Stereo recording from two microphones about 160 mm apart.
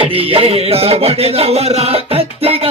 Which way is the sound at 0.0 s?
35° right (ahead or behind).